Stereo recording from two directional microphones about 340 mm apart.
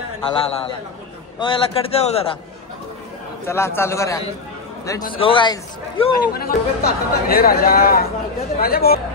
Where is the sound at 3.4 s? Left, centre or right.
Centre.